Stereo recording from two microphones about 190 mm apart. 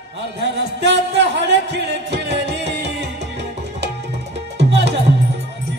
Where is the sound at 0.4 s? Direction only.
65° right (ahead or behind).